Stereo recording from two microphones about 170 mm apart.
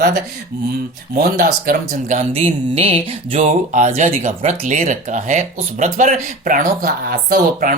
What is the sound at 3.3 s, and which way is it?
A woman's voice, 45° right (ahead or behind).